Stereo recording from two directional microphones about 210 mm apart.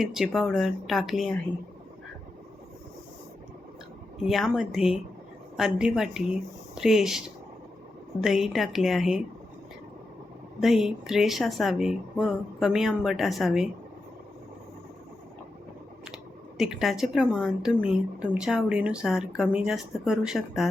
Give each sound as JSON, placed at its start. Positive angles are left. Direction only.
{"t": 0.0, "sound": "speech", "side_deg": 0}
{"t": 4.2, "sound": "speech", "side_deg": 0}
{"t": 10.6, "sound": "speech", "side_deg": 0}
{"t": 16.0, "sound": "speech", "side_deg": 0}